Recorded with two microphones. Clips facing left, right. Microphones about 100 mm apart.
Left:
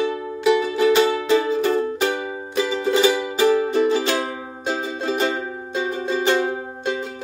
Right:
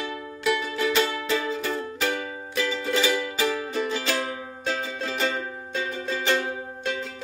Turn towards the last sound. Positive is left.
turn(degrees=30)  # may be behind; listen again after turning